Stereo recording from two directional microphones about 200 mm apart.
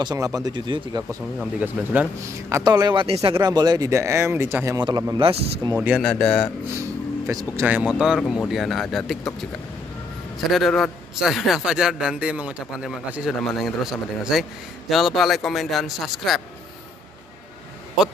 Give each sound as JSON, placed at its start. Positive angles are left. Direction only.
{"t": 0.0, "sound": "speech", "side_deg": -20}
{"t": 1.6, "sound": "speech", "side_deg": -10}
{"t": 5.8, "sound": "a man's voice", "side_deg": 0}
{"t": 7.2, "sound": "a man's voice", "side_deg": -15}
{"t": 10.5, "sound": "a man's voice", "side_deg": 0}